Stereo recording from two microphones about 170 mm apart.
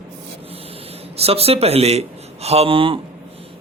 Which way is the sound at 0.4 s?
35° right (ahead or behind).